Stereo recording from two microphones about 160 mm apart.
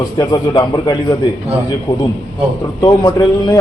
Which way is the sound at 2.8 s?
20° left (ahead or behind).